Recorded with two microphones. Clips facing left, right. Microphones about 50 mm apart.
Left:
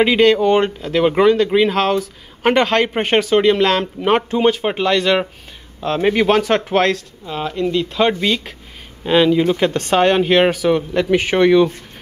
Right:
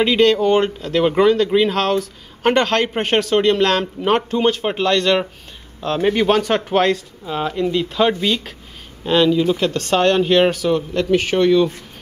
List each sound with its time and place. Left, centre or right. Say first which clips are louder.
0.0 s speech: left 2 dB; centre
9.3 s a man's voice: left 2 dB; left